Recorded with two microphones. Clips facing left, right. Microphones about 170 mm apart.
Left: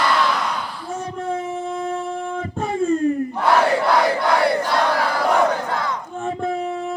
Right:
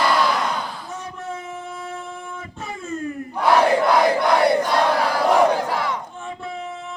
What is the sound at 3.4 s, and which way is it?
Crowd, 10° right (ahead or behind).